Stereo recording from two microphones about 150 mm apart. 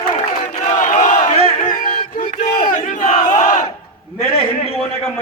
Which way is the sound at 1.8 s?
60° left (ahead or behind).